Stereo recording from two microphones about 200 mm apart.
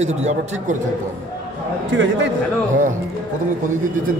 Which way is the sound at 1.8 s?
65° right (ahead or behind).